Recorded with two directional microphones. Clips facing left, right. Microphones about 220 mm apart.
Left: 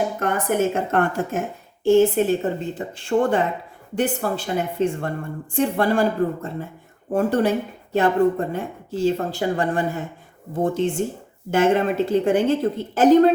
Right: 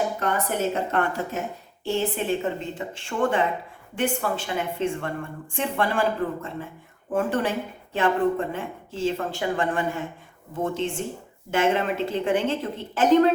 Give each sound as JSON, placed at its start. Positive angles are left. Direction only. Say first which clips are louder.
{"t": 0.2, "sound": "a woman's voice", "louder": "left 4 dB", "side_deg": 50}